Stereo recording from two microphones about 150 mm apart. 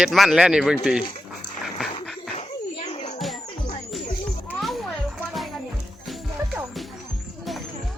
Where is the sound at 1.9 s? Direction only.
40° left (ahead or behind).